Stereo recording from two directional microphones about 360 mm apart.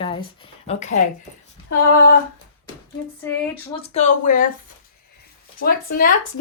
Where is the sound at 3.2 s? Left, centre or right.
Centre.